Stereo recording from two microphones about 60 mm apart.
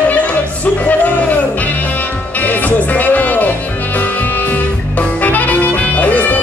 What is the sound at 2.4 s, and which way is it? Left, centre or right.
Music, left.